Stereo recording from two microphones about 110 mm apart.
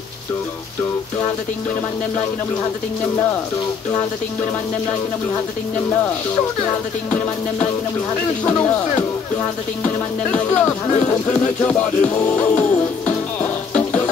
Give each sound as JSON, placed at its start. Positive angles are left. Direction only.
{"t": 7.1, "sound": "speech", "side_deg": 15}
{"t": 11.2, "sound": "music", "side_deg": 15}